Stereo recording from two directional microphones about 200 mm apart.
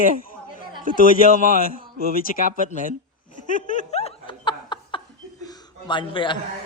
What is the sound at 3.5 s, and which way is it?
Snicker, 40° left (ahead or behind).